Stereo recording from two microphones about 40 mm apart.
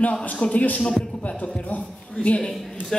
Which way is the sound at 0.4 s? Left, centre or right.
Left.